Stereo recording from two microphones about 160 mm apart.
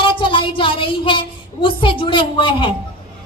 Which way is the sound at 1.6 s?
30° left (ahead or behind).